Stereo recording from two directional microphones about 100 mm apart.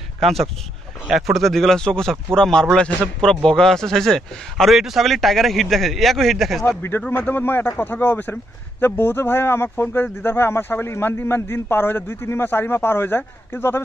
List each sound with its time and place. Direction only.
1.0 s a man's voice: centre (ahead or behind)
7.1 s a man's voice: 20° left (ahead or behind)